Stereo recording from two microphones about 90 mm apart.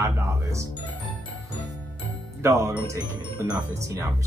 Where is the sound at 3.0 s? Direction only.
50° right (ahead or behind).